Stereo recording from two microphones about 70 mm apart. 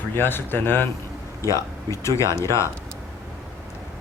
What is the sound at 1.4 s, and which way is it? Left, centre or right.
Speech, left.